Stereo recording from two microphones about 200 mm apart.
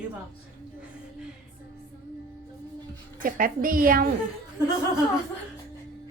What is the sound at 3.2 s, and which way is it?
Speech, 45° right (ahead or behind).